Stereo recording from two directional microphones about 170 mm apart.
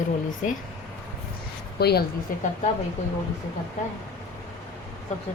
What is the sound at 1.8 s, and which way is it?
Speech, 70° left (ahead or behind).